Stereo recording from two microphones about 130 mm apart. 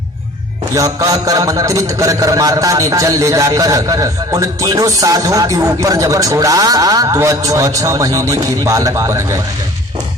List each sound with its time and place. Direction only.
0.7 s a man's voice: 25° right (ahead or behind)